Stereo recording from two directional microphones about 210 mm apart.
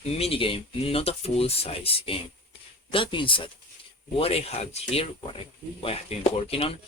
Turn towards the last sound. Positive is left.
turn(degrees=25)  # may be behind; listen again after turning